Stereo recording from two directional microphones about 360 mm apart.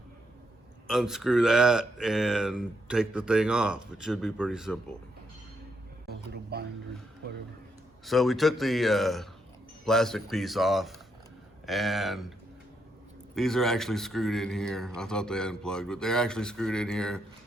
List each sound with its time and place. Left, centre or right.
0.9 s speech: centre
6.1 s music: right
8.0 s speech: centre
13.3 s speech: centre